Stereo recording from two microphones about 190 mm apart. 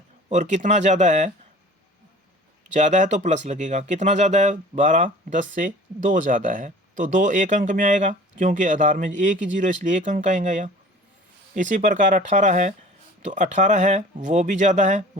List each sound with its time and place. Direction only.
0.3 s speech: 40° right (ahead or behind)
2.7 s speech: 40° right (ahead or behind)